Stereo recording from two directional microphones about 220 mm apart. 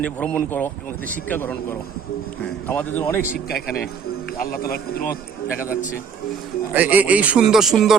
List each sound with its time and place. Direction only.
0.0 s speech: 5° left (ahead or behind)
2.6 s speech: 10° left (ahead or behind)
4.4 s a man's voice: 45° left (ahead or behind)
6.7 s a man's voice: 5° right (ahead or behind)